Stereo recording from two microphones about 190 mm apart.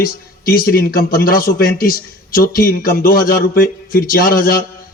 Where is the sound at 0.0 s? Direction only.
50° left (ahead or behind).